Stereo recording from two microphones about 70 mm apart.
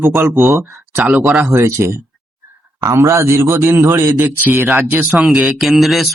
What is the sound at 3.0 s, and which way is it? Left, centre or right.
A man's voice, right.